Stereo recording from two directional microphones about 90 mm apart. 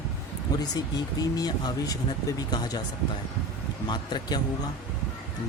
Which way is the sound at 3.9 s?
55° left (ahead or behind).